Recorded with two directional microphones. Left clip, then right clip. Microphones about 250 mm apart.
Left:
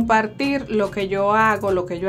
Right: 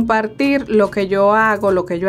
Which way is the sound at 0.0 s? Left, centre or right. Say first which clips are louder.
Right 2 dB; centre.